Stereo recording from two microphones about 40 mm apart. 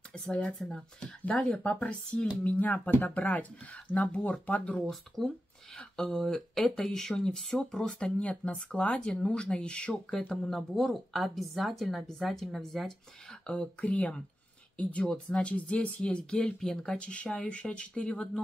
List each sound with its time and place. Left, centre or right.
0.1 s speech: left
0.6 s speech: centre
1.2 s speech: left
2.4 s speech: left
4.8 s speech: centre
6.3 s speech: centre
6.7 s speech: centre
8.2 s speech: left
10.3 s speech: centre
12.5 s speech: centre
13.5 s speech: left